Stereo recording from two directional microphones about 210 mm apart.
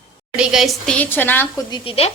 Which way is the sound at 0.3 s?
Centre (ahead or behind).